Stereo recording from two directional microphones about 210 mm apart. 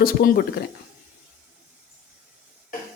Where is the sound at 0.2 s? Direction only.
45° left (ahead or behind).